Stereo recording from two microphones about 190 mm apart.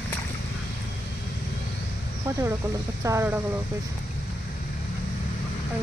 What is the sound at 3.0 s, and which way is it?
Speech, 15° right (ahead or behind).